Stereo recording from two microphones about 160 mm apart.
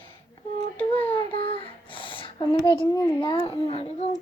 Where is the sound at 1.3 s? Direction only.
35° left (ahead or behind).